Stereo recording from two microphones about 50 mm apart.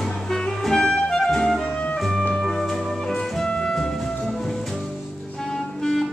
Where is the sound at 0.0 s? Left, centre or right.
Centre.